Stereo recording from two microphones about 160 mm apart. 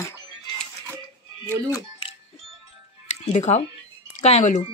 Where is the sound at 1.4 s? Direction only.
15° left (ahead or behind).